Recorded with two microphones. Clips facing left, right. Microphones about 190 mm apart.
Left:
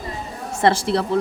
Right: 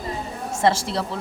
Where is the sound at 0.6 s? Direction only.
60° left (ahead or behind).